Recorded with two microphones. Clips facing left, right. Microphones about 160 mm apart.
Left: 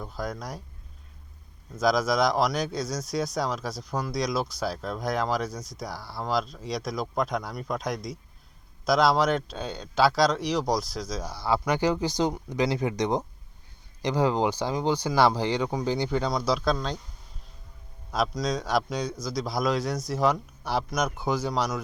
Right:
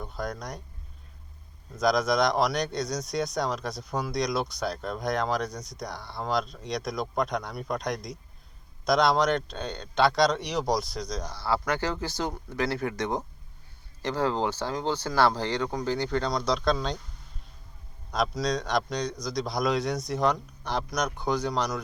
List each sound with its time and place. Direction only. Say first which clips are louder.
0.0 s speech: left 1 dB; centre (ahead or behind)
1.7 s speech: even; centre (ahead or behind)
18.1 s speech: even; 5° left (ahead or behind)